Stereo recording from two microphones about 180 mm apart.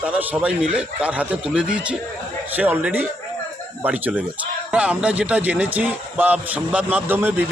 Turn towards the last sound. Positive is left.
turn(degrees=-10)  # may be behind; listen again after turning